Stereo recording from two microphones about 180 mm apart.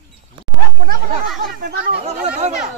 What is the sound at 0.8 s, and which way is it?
Speech, 55° right (ahead or behind).